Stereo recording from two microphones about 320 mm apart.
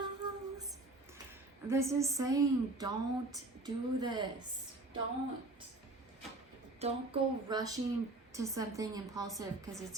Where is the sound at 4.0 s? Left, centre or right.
Centre.